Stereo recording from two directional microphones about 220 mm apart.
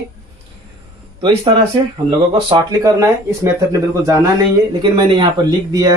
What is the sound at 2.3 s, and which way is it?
Speech, 20° right (ahead or behind).